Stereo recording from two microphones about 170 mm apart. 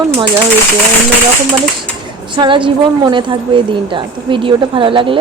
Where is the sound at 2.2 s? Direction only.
30° right (ahead or behind).